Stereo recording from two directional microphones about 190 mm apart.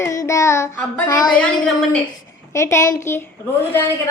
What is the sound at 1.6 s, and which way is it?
Speech, 5° left (ahead or behind).